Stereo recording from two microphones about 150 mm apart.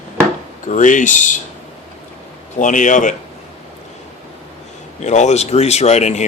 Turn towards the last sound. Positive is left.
turn(degrees=50)  # may be behind; listen again after turning